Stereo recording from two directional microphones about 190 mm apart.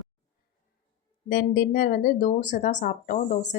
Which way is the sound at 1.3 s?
50° left (ahead or behind).